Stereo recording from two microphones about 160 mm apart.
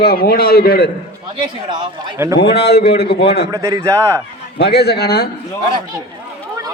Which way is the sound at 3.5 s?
20° right (ahead or behind).